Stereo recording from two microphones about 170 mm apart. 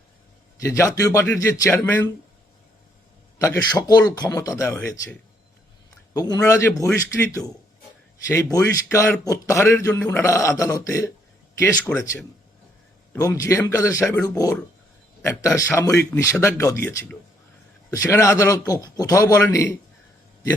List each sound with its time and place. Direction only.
0.6 s speech: 20° left (ahead or behind)
3.4 s speech: 20° left (ahead or behind)
6.1 s speech: 20° left (ahead or behind)
8.3 s speech: 15° left (ahead or behind)
13.1 s speech: 20° left (ahead or behind)